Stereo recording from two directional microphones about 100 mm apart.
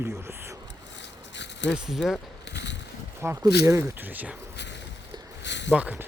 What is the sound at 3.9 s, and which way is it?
Speech, 15° right (ahead or behind).